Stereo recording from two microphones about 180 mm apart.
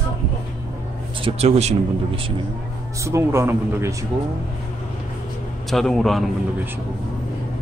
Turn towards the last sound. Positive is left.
turn(degrees=0)  # may be behind; listen again after turning